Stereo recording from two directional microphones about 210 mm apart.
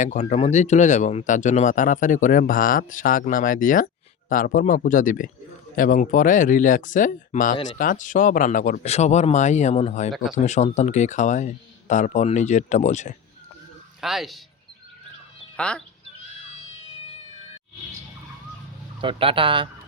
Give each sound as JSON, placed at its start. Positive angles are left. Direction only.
{"t": 0.0, "sound": "speech", "side_deg": 35}
{"t": 14.0, "sound": "speech", "side_deg": 0}
{"t": 15.5, "sound": "speech", "side_deg": 5}
{"t": 17.0, "sound": "cat", "side_deg": 30}
{"t": 19.0, "sound": "speech", "side_deg": -25}